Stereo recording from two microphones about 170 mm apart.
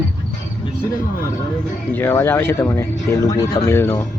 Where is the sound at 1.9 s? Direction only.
10° left (ahead or behind).